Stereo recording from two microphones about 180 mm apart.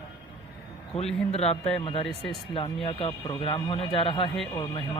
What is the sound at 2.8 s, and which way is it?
Speech, 30° left (ahead or behind).